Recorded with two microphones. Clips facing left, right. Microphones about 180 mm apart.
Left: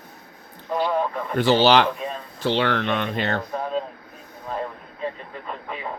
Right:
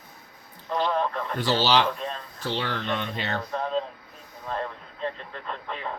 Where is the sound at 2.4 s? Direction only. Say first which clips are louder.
Left 8 dB; 75° left (ahead or behind).